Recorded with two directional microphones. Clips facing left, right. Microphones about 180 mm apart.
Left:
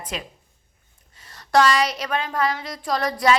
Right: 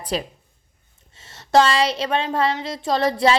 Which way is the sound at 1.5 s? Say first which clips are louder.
Right 2 dB; 25° right (ahead or behind).